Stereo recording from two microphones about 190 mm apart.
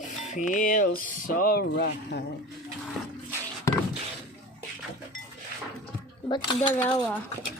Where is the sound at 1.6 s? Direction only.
65° left (ahead or behind).